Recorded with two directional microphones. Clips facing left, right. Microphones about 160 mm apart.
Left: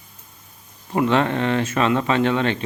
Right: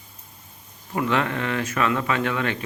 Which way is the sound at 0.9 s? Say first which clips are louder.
Left 5 dB; 30° left (ahead or behind).